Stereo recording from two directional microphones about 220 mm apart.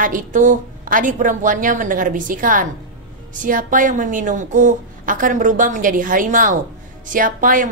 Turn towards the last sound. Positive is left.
turn(degrees=-40)  # may be behind; listen again after turning